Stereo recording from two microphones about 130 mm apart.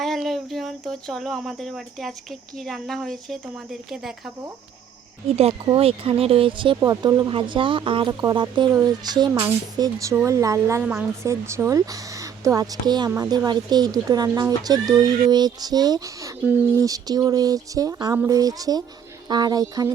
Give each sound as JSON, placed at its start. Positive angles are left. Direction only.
{"t": 0.0, "sound": "speech", "side_deg": 0}
{"t": 5.6, "sound": "speech", "side_deg": -45}
{"t": 6.7, "sound": "speech", "side_deg": -25}